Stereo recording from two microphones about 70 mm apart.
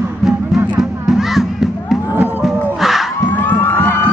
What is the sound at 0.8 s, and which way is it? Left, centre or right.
Music, centre.